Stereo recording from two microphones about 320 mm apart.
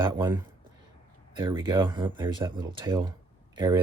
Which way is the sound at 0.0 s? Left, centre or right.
Centre.